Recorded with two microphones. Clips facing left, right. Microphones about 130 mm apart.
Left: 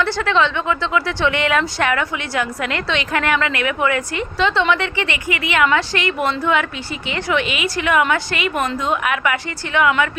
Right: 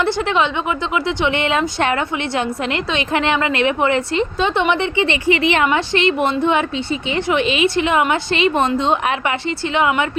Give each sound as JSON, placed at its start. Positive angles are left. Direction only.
{"t": 0.0, "sound": "speech", "side_deg": -20}